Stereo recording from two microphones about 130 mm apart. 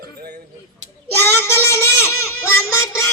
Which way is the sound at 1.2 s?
15° left (ahead or behind).